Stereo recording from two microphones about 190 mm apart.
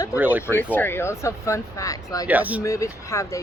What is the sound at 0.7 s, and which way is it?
Speech, 10° left (ahead or behind).